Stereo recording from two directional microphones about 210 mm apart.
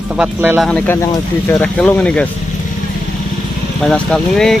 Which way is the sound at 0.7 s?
10° left (ahead or behind).